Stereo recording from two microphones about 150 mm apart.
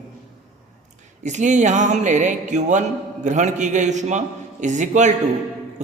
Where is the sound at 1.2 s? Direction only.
50° right (ahead or behind).